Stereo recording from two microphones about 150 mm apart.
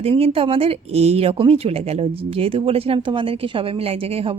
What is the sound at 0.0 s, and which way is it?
Speech, 40° right (ahead or behind).